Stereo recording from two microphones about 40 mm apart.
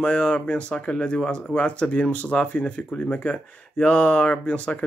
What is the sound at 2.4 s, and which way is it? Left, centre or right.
Speech, left.